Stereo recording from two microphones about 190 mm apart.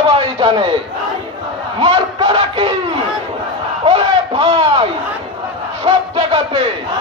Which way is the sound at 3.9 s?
30° right (ahead or behind).